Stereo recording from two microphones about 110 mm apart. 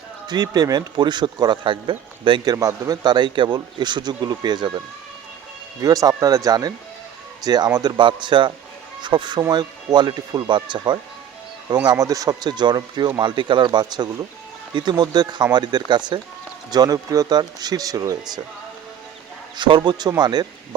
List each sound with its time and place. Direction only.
0.3 s speech: 35° right (ahead or behind)
5.8 s speech: 35° right (ahead or behind)
11.9 s speech: 30° right (ahead or behind)
19.5 s speech: 45° right (ahead or behind)